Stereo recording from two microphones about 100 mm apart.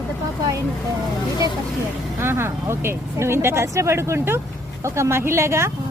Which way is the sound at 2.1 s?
25° right (ahead or behind).